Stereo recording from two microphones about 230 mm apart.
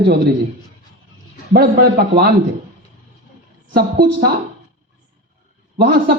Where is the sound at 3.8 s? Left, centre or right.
Right.